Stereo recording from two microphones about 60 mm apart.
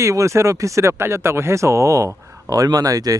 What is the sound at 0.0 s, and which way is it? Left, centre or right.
Speech, right.